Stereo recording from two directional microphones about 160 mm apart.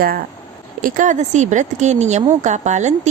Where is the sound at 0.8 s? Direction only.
55° right (ahead or behind).